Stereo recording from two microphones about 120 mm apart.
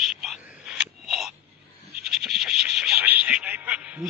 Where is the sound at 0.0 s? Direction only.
Centre (ahead or behind).